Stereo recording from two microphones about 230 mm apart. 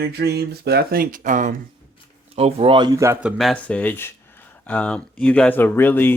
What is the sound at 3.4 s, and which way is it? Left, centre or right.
Speech, centre.